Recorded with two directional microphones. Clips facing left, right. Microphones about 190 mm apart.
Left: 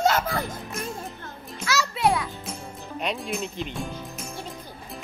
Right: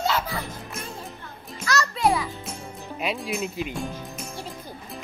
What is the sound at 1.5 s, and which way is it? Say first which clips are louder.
Music: right 1 dB; 5° left (ahead or behind).